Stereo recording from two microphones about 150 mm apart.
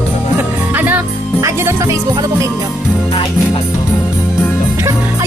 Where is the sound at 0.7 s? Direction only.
10° right (ahead or behind).